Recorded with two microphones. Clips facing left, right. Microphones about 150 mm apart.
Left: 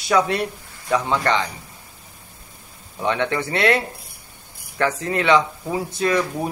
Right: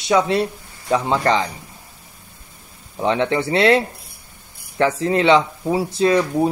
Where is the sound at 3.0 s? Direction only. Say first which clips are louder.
Right 3 dB; 30° right (ahead or behind).